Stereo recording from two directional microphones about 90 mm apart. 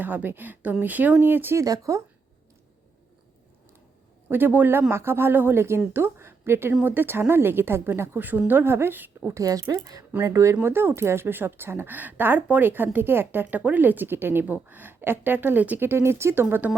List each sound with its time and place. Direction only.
0.0 s speech: 20° right (ahead or behind)
1.5 s speech: 40° right (ahead or behind)
4.3 s speech: 20° right (ahead or behind)
9.3 s speech: 35° right (ahead or behind); by 16.7 s 20° right (ahead or behind)